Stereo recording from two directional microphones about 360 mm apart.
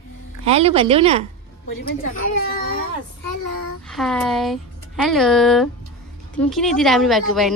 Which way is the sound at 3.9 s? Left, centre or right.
Centre.